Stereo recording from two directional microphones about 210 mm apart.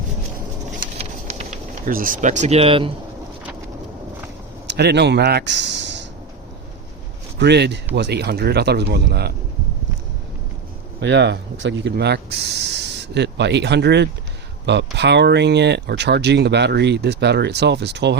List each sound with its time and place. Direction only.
0.9 s a sound: 35° right (ahead or behind)
4.6 s speech: 55° right (ahead or behind)
7.3 s speech: 55° right (ahead or behind)
11.0 s speech: 55° right (ahead or behind)